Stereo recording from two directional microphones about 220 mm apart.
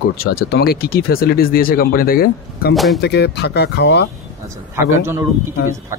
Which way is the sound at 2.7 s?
Centre (ahead or behind).